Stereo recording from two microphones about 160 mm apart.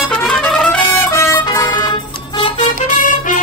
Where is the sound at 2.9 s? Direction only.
50° left (ahead or behind).